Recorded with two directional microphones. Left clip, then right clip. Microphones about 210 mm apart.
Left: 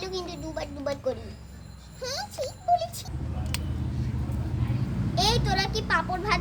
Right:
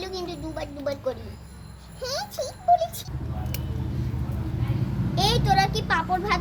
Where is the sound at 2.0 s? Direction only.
10° left (ahead or behind).